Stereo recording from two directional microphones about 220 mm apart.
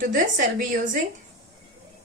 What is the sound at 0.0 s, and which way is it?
Speech, 35° right (ahead or behind).